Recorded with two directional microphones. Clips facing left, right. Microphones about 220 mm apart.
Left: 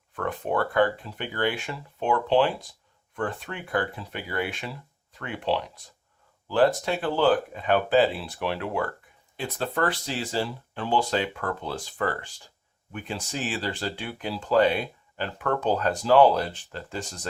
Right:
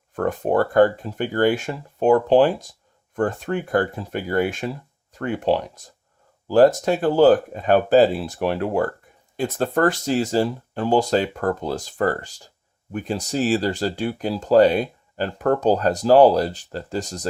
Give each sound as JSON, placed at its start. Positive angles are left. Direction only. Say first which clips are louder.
{"t": 0.1, "sound": "speech", "louder": "right 7 dB", "side_deg": -45}